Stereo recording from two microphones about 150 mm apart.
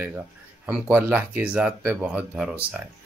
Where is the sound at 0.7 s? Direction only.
5° right (ahead or behind).